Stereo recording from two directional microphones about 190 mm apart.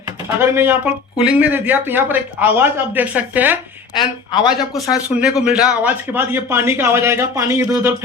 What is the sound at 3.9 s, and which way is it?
Speech, 25° left (ahead or behind).